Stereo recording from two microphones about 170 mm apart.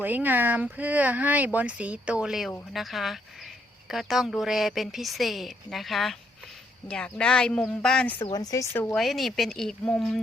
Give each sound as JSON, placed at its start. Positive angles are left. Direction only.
{"t": 0.0, "sound": "speech", "side_deg": -10}
{"t": 8.3, "sound": "speech", "side_deg": 20}
{"t": 9.0, "sound": "speech", "side_deg": 0}